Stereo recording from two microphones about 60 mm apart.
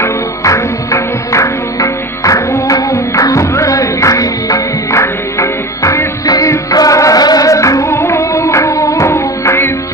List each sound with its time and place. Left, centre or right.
0.0 s music: left
2.7 s music: left
4.9 s music: left
6.2 s music: left
6.7 s music: left